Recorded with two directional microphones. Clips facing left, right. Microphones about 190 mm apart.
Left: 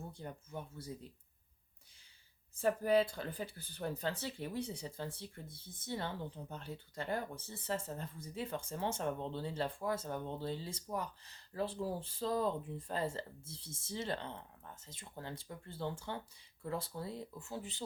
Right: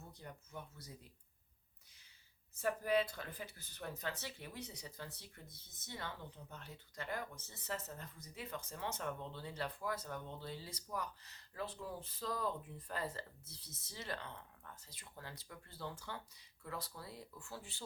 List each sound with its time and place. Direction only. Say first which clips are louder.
0.1 s speech: left 6 dB; 30° left (ahead or behind)
2.6 s speech: left 5 dB; 30° left (ahead or behind)